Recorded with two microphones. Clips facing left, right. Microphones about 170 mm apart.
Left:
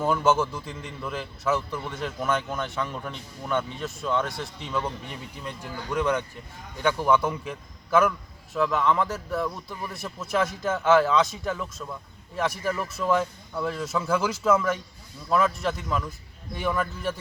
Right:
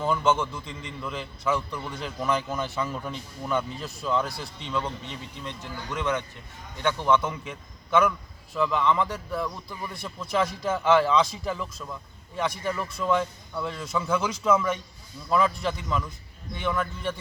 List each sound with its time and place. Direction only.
0.0 s a man's voice: 5° left (ahead or behind)